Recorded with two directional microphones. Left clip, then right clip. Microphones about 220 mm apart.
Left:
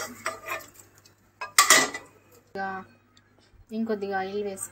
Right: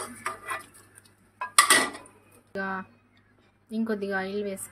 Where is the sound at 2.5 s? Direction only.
35° right (ahead or behind).